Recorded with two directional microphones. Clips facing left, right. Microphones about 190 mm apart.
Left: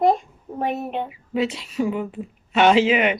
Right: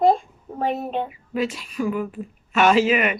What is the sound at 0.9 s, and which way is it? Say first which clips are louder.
Speech: right 1 dB; 25° left (ahead or behind).